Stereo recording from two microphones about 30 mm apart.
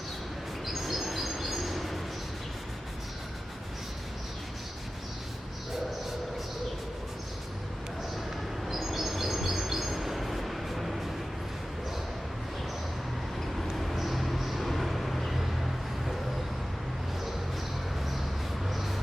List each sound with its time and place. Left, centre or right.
0.6 s bird: centre
8.6 s bird: centre
13.7 s vehicle: centre
18.7 s a sound: centre